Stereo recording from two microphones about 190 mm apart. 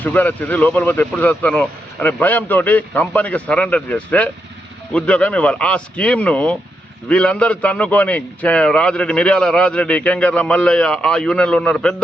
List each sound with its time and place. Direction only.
0.0 s a man's voice: 10° left (ahead or behind)